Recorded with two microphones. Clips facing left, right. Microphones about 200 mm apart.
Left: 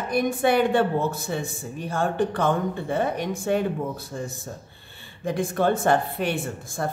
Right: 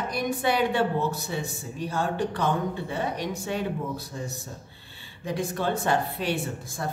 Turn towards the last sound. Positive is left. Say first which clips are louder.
# left 2 dB
turn(degrees=55)  # may be behind; listen again after turning